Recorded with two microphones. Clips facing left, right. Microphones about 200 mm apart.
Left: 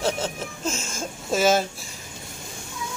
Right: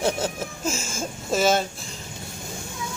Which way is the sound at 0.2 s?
5° right (ahead or behind).